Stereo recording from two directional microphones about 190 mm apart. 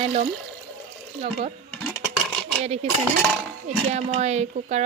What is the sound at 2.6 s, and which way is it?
Speech, 35° right (ahead or behind).